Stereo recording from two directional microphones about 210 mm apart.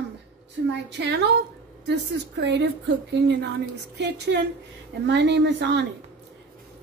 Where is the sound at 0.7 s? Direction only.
55° right (ahead or behind).